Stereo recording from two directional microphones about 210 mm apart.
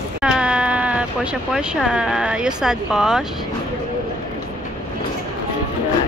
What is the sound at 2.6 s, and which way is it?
Speech, 5° right (ahead or behind).